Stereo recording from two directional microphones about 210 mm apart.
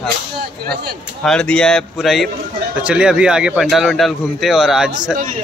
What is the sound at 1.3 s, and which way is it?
Speech, 5° left (ahead or behind).